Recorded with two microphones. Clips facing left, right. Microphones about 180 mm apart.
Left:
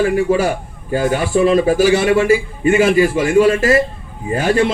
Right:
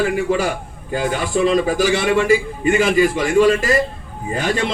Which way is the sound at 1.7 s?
5° left (ahead or behind).